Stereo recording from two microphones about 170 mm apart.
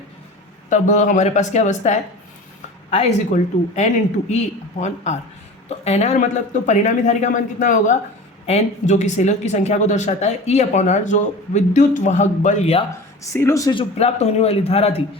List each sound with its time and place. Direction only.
0.7 s a man's voice: 45° left (ahead or behind)
13.3 s speech: 15° left (ahead or behind)
14.0 s a man's voice: 40° left (ahead or behind)